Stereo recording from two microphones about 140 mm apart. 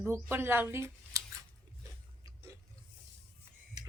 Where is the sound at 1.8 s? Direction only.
25° right (ahead or behind).